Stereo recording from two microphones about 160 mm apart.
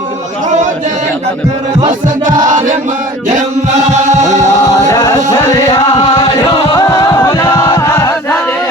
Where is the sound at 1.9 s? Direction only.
55° right (ahead or behind).